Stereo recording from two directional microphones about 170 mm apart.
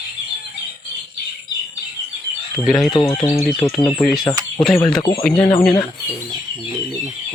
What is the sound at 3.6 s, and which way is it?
Speech, 40° left (ahead or behind).